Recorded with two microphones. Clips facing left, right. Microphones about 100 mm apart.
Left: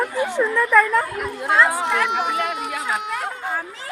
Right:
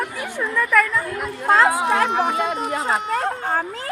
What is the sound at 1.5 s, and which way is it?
Speech, 40° right (ahead or behind).